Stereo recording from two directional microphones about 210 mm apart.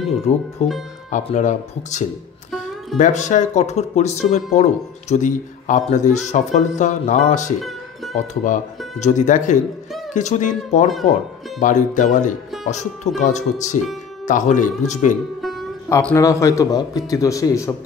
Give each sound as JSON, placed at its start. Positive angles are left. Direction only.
{"t": 0.3, "sound": "a man's voice", "side_deg": 30}
{"t": 7.6, "sound": "music", "side_deg": 0}
{"t": 8.5, "sound": "a man's voice", "side_deg": 35}
{"t": 15.9, "sound": "a man's voice", "side_deg": 10}